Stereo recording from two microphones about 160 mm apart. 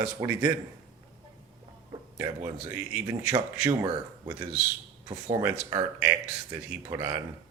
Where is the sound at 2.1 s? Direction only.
15° right (ahead or behind).